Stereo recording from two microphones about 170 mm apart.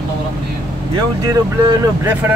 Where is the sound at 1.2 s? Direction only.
15° right (ahead or behind).